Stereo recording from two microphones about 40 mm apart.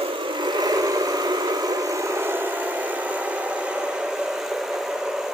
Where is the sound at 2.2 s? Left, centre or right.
Right.